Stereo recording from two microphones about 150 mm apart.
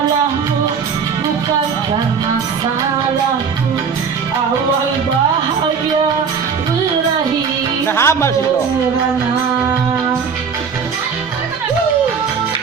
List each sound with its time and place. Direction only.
7.9 s music: 15° left (ahead or behind)